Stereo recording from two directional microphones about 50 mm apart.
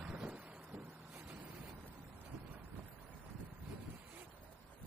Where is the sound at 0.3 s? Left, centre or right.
Right.